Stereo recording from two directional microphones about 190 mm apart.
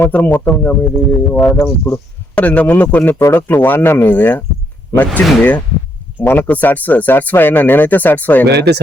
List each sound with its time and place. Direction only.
0.0 s speech: 10° left (ahead or behind)
8.4 s speech: 60° right (ahead or behind)